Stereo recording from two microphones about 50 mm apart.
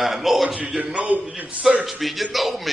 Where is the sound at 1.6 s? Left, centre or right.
Centre.